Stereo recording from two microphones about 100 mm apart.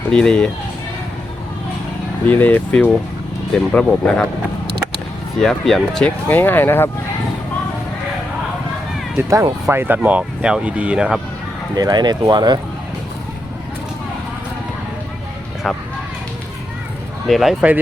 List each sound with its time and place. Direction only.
0.1 s speech: 10° left (ahead or behind)
2.2 s speech: 15° left (ahead or behind)
5.4 s speech: 5° left (ahead or behind)
6.2 s speech: 20° left (ahead or behind)
9.3 s speech: 30° right (ahead or behind)
10.0 s speech: 10° right (ahead or behind)
11.7 s speech: 40° right (ahead or behind)
15.6 s speech: centre (ahead or behind)
17.2 s speech: centre (ahead or behind)